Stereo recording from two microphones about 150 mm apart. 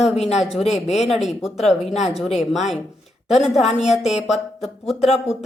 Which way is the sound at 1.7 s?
45° left (ahead or behind).